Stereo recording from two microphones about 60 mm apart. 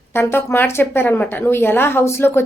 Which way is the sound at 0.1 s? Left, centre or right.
Left.